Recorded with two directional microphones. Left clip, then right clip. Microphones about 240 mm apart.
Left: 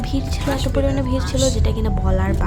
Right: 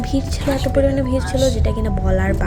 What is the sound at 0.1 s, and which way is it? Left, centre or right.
A woman's voice, centre.